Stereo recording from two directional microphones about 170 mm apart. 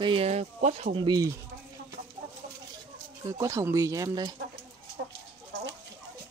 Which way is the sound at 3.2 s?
20° right (ahead or behind).